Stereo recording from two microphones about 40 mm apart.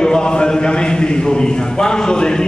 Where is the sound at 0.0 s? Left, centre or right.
Centre.